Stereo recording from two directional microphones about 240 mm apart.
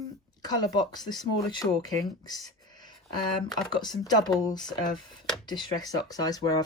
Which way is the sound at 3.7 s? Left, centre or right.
Centre.